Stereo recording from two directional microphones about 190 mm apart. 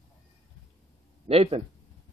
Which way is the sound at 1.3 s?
30° right (ahead or behind).